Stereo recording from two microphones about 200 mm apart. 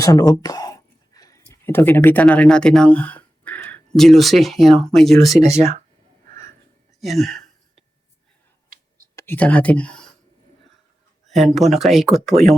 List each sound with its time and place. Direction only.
0.0 s speech: 15° left (ahead or behind); by 5.4 s centre (ahead or behind)
5.5 s speech: 30° right (ahead or behind)
7.0 s a sound: centre (ahead or behind)
9.1 s speech: 10° left (ahead or behind)
11.3 s speech: centre (ahead or behind)